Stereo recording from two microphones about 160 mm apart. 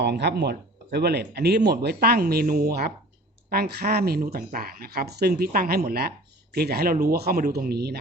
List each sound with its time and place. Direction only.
0.0 s speech: 90° right
5.4 s speech: 65° right (ahead or behind); by 7.9 s 85° right